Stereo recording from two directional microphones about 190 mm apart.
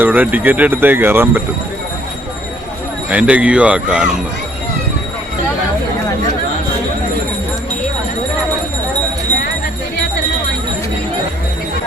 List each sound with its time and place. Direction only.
0.0 s speech: 10° right (ahead or behind)
3.1 s speech: 5° right (ahead or behind)